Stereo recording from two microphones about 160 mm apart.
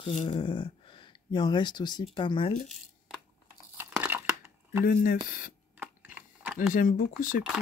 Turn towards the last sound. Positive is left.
turn(degrees=55)  # may be behind; listen again after turning